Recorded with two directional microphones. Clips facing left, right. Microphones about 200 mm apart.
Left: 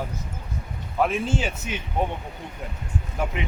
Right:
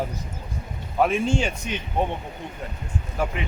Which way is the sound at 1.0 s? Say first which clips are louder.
Right 2 dB; centre (ahead or behind).